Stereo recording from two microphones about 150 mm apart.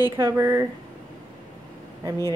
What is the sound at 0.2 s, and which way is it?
Speech, 20° right (ahead or behind).